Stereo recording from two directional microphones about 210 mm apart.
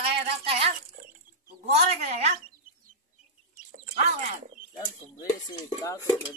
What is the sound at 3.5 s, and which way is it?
Bird, 35° right (ahead or behind).